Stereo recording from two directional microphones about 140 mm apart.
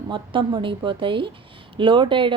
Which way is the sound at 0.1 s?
35° right (ahead or behind).